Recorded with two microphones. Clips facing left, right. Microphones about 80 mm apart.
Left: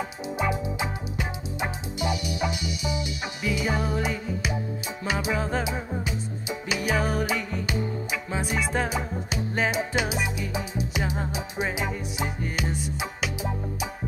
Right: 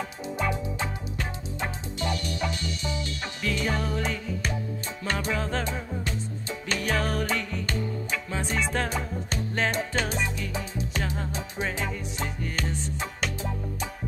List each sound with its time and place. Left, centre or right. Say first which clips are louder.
0.4 s music: left 2 dB; centre